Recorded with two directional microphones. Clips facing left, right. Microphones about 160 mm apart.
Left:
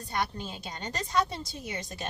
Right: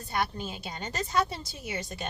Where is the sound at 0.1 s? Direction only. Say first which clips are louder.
Right 1 dB; 5° right (ahead or behind).